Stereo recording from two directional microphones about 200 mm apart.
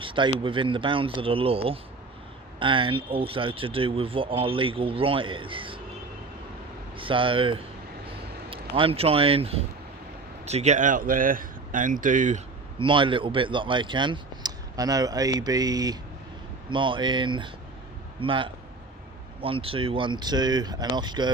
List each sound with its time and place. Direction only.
0.0 s a sound: 25° right (ahead or behind)
0.3 s a man's voice: 25° right (ahead or behind)
6.9 s a man's voice: 25° right (ahead or behind)
8.7 s a man's voice: 25° right (ahead or behind)
12.8 s a man's voice: 25° right (ahead or behind)